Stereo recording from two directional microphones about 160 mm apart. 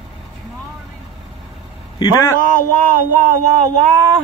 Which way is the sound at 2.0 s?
20° left (ahead or behind).